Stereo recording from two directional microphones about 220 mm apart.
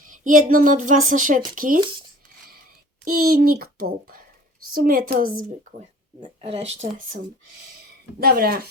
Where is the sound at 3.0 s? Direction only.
45° right (ahead or behind).